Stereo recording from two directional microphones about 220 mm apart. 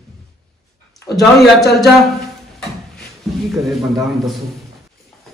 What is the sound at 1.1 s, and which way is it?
Speech, 20° left (ahead or behind).